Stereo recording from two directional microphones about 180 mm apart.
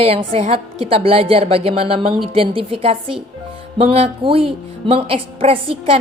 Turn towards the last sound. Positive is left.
turn(degrees=-30)  # may be behind; listen again after turning